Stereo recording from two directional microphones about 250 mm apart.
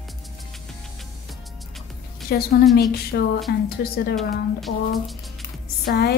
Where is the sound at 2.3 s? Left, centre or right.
Left.